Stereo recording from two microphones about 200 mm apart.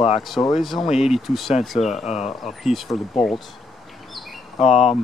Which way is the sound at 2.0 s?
35° left (ahead or behind).